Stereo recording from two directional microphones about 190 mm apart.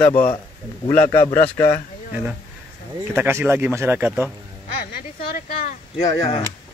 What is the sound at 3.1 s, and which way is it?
Speech, 10° right (ahead or behind).